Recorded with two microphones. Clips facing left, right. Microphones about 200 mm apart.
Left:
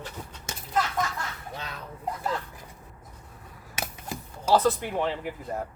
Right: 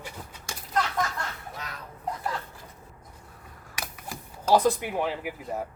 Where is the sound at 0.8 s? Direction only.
5° left (ahead or behind).